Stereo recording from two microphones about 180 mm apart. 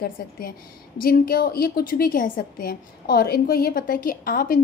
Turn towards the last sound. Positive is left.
turn(degrees=50)  # may be behind; listen again after turning